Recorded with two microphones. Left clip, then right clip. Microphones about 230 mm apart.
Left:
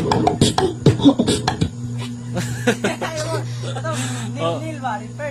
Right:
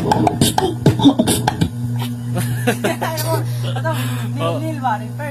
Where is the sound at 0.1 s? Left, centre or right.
Right.